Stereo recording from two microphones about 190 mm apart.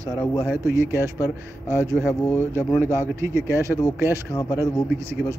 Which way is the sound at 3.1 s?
15° right (ahead or behind).